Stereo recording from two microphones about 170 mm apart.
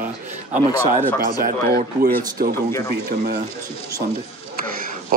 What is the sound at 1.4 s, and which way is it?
Speech, 60° right (ahead or behind).